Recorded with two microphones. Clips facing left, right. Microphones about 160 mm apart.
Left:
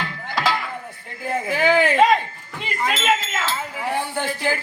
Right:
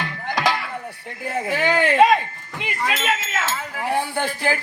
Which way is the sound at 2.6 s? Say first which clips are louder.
Even; centre (ahead or behind).